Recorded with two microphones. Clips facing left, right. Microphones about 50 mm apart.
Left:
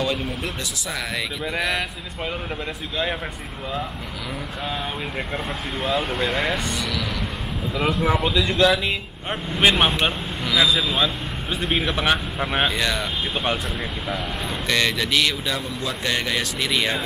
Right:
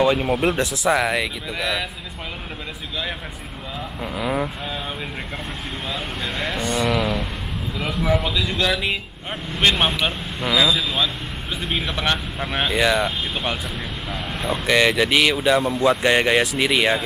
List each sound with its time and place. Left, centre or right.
0.0 s speech: right
0.3 s speech: right
0.8 s speech: centre
4.2 s speech: right
5.9 s speech: centre
6.6 s speech: centre
6.9 s speech: right
7.8 s speech: centre
9.5 s speech: centre
12.7 s speech: centre
14.1 s speech: centre
14.7 s speech: centre